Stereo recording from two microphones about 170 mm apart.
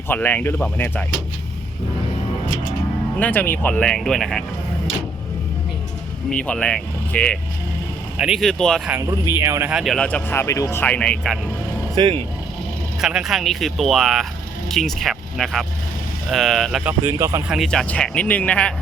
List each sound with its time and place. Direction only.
0.1 s speech: 10° left (ahead or behind)
3.2 s speech: 10° left (ahead or behind)
6.3 s speech: 5° left (ahead or behind)
8.1 s speech: 5° right (ahead or behind)
8.9 s speech: 15° right (ahead or behind)
9.7 s speech: centre (ahead or behind)
11.9 s speech: 30° right (ahead or behind)
13.0 s speech: 5° right (ahead or behind)
16.8 s speech: 15° right (ahead or behind)
17.5 s speech: centre (ahead or behind)